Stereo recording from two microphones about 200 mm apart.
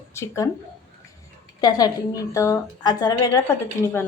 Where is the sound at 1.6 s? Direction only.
20° left (ahead or behind).